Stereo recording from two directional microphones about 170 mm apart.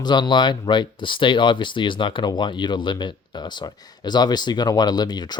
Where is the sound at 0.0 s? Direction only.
25° left (ahead or behind).